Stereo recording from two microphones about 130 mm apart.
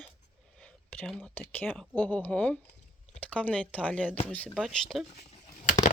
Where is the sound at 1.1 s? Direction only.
5° left (ahead or behind).